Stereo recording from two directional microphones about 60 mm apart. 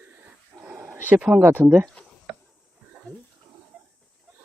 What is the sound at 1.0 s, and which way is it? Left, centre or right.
Speech, right.